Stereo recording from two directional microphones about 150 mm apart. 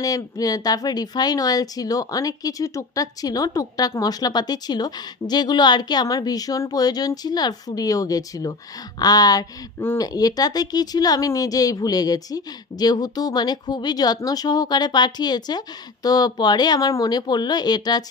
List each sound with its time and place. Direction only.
0.0 s speech: 25° left (ahead or behind)